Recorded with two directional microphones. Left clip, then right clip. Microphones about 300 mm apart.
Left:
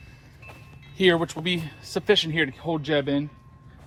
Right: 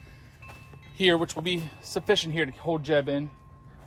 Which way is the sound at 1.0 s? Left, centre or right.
Left.